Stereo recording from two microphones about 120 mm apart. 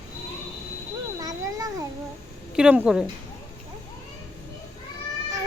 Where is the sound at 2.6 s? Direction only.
10° right (ahead or behind).